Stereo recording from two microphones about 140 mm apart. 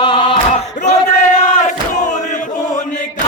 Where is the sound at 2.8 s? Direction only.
60° left (ahead or behind).